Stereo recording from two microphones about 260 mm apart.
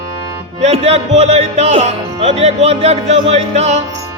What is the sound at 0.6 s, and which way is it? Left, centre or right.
Music, right.